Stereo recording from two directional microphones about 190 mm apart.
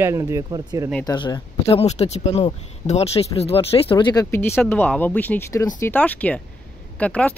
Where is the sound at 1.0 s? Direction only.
20° left (ahead or behind).